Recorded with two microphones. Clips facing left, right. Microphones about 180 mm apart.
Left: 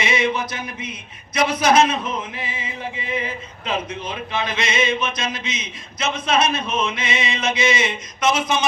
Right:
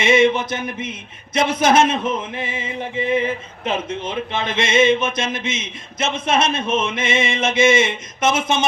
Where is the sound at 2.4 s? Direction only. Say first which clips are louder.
Right 4 dB; 50° right (ahead or behind).